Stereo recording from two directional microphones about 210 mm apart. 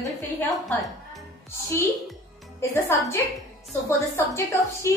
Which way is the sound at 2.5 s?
15° left (ahead or behind).